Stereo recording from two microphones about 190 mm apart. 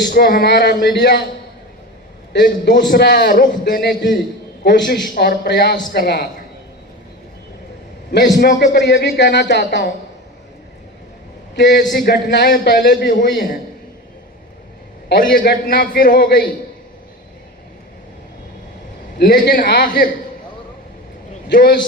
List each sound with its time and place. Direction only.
0.1 s speech: 55° left (ahead or behind)
2.3 s speech: 65° left (ahead or behind)
3.2 s a man's voice: 45° left (ahead or behind)
8.4 s speech: 60° left (ahead or behind)
11.5 s speech: 65° left (ahead or behind)
11.8 s speech: 50° left (ahead or behind)
13.1 s a man's voice: 45° left (ahead or behind)
15.1 s a man's voice: 45° left (ahead or behind)
19.2 s speech: 55° left (ahead or behind)
21.5 s speech: 60° left (ahead or behind)